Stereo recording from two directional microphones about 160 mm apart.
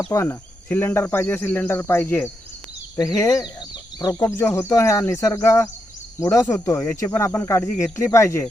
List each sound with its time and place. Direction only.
0.1 s cricket: 15° left (ahead or behind)